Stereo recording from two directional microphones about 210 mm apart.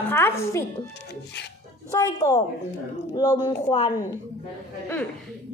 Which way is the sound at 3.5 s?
15° left (ahead or behind).